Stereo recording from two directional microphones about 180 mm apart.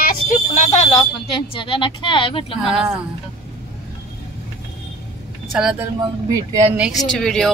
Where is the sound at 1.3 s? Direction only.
30° left (ahead or behind).